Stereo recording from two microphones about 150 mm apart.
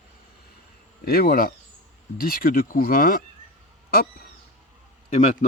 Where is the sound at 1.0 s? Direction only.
90° left.